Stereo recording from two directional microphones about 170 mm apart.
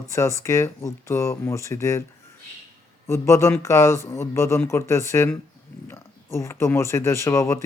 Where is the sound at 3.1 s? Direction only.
15° left (ahead or behind).